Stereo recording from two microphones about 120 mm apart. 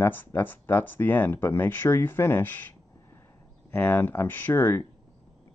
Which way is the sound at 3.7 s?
15° left (ahead or behind).